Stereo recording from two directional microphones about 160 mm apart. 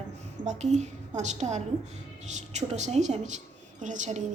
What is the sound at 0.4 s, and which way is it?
Speech, 45° right (ahead or behind).